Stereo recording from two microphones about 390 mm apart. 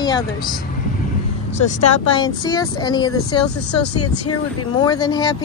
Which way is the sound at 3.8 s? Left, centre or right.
Left.